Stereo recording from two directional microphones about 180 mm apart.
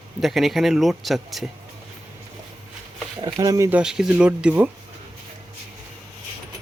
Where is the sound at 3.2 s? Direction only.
20° right (ahead or behind).